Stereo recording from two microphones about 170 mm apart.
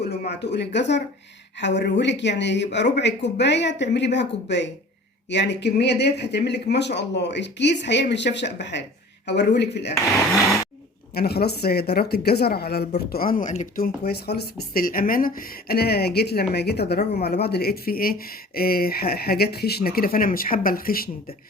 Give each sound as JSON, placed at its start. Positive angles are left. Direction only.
{"t": 0.0, "sound": "speech", "side_deg": 75}
{"t": 11.1, "sound": "speech", "side_deg": 65}
{"t": 13.1, "sound": "speech", "side_deg": 60}
{"t": 15.7, "sound": "speech", "side_deg": 65}